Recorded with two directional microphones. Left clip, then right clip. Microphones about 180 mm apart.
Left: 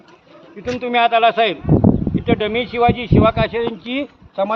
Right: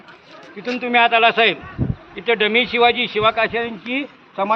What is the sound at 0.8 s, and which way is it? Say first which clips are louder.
Speech: even; 55° left (ahead or behind).